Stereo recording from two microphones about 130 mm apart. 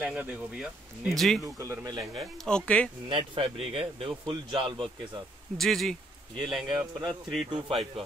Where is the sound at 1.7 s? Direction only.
30° right (ahead or behind).